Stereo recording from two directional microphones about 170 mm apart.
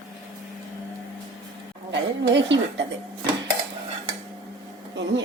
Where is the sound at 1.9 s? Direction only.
90° right.